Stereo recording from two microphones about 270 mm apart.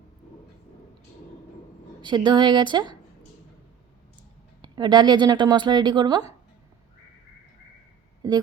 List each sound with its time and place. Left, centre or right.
2.0 s speech: centre
4.6 s speech: centre